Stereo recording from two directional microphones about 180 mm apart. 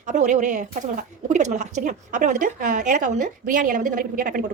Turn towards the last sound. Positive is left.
turn(degrees=-50)  # may be behind; listen again after turning